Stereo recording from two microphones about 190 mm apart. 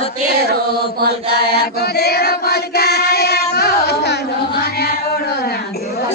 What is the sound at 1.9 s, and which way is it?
Child singing, 60° left (ahead or behind).